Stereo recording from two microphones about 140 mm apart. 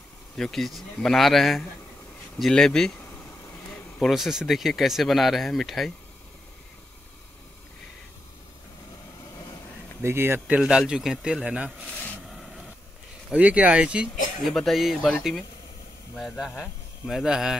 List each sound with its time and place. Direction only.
0.4 s speech: centre (ahead or behind)
4.0 s speech: centre (ahead or behind)
10.0 s speech: 15° right (ahead or behind)
10.4 s speech: 5° right (ahead or behind)
13.3 s speech: 10° right (ahead or behind)